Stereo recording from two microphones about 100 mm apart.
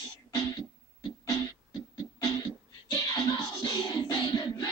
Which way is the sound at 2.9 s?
40° left (ahead or behind).